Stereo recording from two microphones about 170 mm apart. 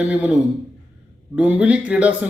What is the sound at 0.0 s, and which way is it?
Speech, 10° right (ahead or behind).